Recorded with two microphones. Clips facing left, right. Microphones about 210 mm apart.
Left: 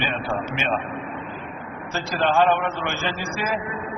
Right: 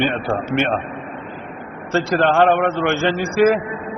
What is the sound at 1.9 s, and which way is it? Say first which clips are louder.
A man's voice: right 6 dB; 65° right (ahead or behind).